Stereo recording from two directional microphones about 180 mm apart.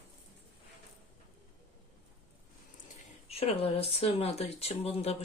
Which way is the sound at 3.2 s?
35° left (ahead or behind).